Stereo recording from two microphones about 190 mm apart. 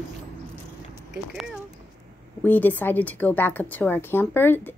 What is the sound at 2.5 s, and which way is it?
Speech, 10° left (ahead or behind).